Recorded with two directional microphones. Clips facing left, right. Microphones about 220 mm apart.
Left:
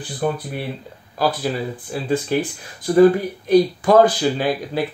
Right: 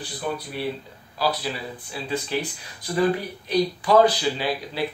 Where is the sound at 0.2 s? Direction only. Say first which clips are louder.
Left 5 dB; 45° left (ahead or behind).